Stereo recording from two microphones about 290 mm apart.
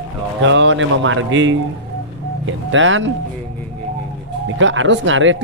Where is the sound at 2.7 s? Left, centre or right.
Right.